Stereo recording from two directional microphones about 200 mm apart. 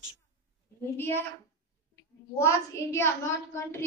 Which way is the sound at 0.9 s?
10° left (ahead or behind).